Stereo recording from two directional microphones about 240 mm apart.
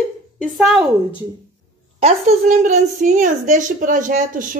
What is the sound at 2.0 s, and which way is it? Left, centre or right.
A woman's voice, right.